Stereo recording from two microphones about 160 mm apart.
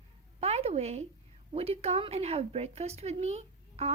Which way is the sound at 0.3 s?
40° right (ahead or behind).